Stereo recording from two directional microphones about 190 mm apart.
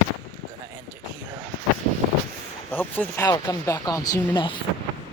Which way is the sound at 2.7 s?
10° left (ahead or behind).